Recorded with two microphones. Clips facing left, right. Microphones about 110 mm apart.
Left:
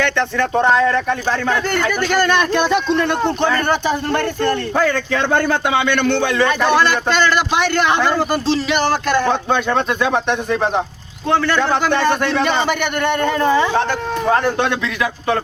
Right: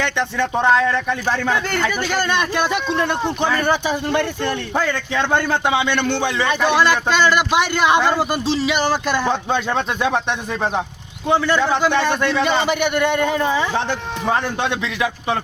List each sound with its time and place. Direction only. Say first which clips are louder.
0.0 s speech: left 3 dB; 20° right (ahead or behind)
2.0 s speech: left 4 dB; 50° left (ahead or behind)
2.4 s a man's voice: left 4 dB; 10° right (ahead or behind)
4.8 s speech: left 3 dB; 45° left (ahead or behind)
5.5 s speech: left 2 dB; 20° right (ahead or behind)
7.2 s a man's voice: even; 10° right (ahead or behind)
11.3 s a man's voice: left 1 dB; 15° right (ahead or behind)
11.7 s speech: left 2 dB; 50° left (ahead or behind)
12.5 s a man's voice: even; 15° right (ahead or behind)
13.5 s speech: left 5 dB; 50° left (ahead or behind)